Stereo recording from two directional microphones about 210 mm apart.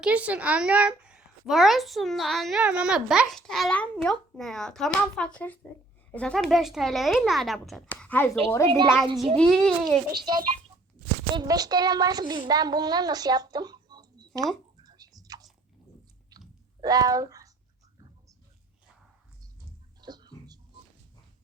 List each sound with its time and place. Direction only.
0.0 s a woman's voice: 5° right (ahead or behind)
10.2 s a child's voice: 20° right (ahead or behind)
16.3 s chewing: 20° right (ahead or behind)
16.8 s speech: 20° right (ahead or behind)
20.0 s music: 20° right (ahead or behind)